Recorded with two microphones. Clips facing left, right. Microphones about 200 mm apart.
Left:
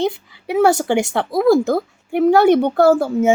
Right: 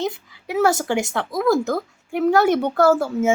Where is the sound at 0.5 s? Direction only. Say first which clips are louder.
Left 4 dB; 30° left (ahead or behind).